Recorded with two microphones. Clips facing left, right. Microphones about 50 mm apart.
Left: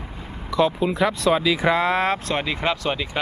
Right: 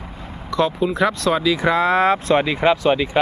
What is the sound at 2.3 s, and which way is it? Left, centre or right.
Speech, centre.